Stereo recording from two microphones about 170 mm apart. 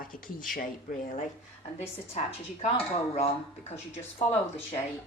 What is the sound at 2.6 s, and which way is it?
A woman's voice, 35° left (ahead or behind).